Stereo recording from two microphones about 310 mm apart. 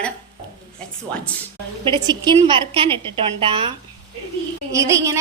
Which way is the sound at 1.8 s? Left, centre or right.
Centre.